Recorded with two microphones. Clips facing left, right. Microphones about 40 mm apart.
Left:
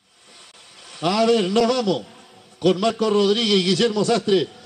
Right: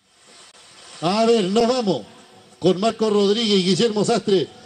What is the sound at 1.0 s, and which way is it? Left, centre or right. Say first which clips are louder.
A man's voice: right 1 dB; centre.